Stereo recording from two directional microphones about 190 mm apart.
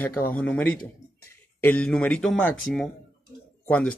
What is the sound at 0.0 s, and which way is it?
Speech, 10° left (ahead or behind).